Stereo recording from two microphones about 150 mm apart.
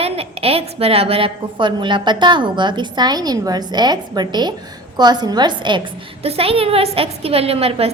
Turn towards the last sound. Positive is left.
turn(degrees=-40)  # may be behind; listen again after turning